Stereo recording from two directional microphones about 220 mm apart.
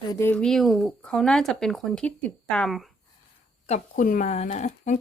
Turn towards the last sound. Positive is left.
turn(degrees=30)  # may be behind; listen again after turning